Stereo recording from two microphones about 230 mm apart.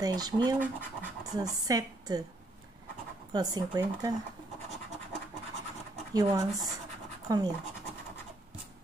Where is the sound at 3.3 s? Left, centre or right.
Centre.